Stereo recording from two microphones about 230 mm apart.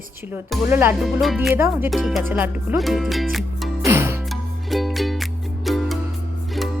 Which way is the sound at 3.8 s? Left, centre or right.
Centre.